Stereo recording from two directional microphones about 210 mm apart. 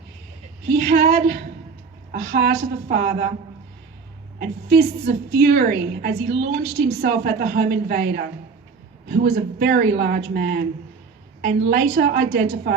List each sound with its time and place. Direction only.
0.7 s a woman's voice: 50° right (ahead or behind)
4.4 s a woman's voice: 50° right (ahead or behind)